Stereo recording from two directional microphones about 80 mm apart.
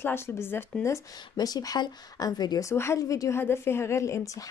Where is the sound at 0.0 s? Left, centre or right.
Left.